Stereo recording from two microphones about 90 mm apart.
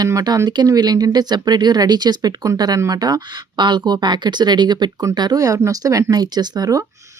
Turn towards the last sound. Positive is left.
turn(degrees=-40)  # may be behind; listen again after turning